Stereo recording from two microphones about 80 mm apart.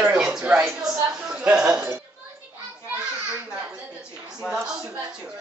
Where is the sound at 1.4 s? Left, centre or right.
Centre.